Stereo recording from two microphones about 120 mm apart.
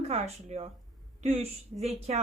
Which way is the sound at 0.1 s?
65° right (ahead or behind).